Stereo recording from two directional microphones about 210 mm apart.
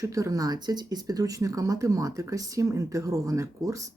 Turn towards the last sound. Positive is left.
turn(degrees=-15)  # may be behind; listen again after turning